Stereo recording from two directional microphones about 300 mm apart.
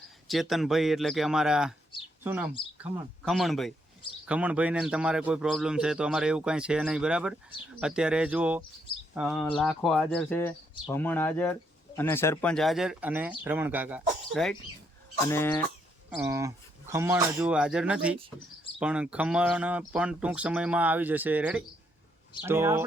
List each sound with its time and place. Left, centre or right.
0.3 s a man's voice: centre
16.0 s a man's voice: centre